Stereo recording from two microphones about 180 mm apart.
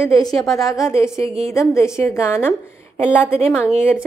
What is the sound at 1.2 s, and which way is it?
Speech, 35° right (ahead or behind).